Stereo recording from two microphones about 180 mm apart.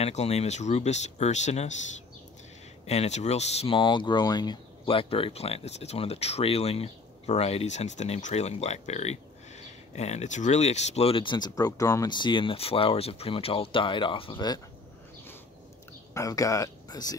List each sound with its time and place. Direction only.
0.0 s speech: 35° left (ahead or behind)
2.9 s speech: 40° left (ahead or behind)
16.1 s speech: 20° left (ahead or behind)